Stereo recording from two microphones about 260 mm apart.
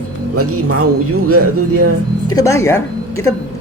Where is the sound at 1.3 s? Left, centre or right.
Right.